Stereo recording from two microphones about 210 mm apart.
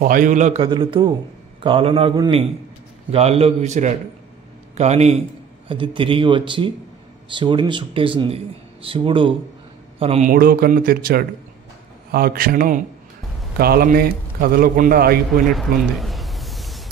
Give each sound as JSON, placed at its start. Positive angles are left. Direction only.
{"t": 0.0, "sound": "a man's voice", "side_deg": -40}
{"t": 0.7, "sound": "a man's voice", "side_deg": -25}
{"t": 10.3, "sound": "a man's voice", "side_deg": -45}
{"t": 15.5, "sound": "a sound", "side_deg": 0}